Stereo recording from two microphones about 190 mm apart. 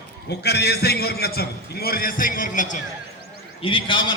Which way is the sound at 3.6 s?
25° left (ahead or behind).